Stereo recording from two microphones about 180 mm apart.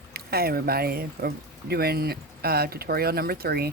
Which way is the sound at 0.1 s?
60° right (ahead or behind).